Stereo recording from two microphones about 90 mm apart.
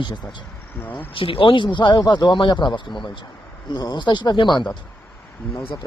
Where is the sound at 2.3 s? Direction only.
60° left (ahead or behind).